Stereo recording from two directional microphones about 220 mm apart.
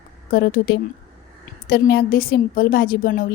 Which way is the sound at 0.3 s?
45° left (ahead or behind).